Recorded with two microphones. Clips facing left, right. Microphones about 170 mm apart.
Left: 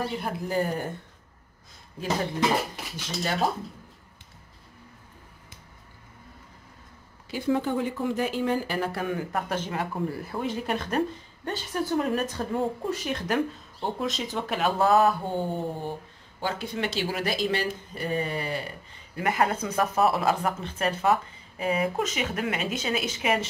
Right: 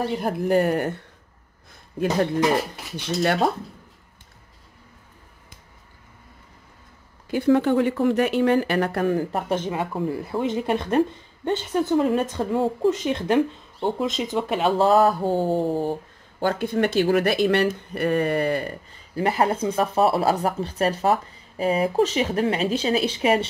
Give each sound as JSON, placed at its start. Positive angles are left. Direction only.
{"t": 0.1, "sound": "speech", "side_deg": -50}
{"t": 3.2, "sound": "speech", "side_deg": -60}
{"t": 7.2, "sound": "speech", "side_deg": -65}
{"t": 9.0, "sound": "speech", "side_deg": -35}
{"t": 9.5, "sound": "a woman's voice", "side_deg": -20}
{"t": 16.3, "sound": "speech", "side_deg": -55}
{"t": 19.1, "sound": "speech", "side_deg": -30}